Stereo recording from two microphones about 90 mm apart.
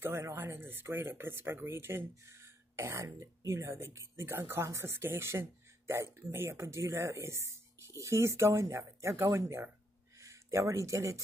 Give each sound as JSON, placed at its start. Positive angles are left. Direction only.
{"t": 0.0, "sound": "speech", "side_deg": -30}